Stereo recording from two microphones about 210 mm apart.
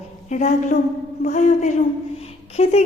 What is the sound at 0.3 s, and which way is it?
A woman's voice, 35° left (ahead or behind).